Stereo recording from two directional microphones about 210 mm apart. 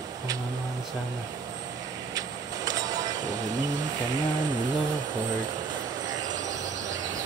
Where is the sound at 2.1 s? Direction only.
15° right (ahead or behind).